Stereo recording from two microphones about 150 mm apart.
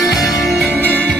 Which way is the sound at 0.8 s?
10° left (ahead or behind).